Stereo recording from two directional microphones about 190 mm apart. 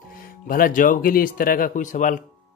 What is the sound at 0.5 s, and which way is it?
Speech, 50° left (ahead or behind).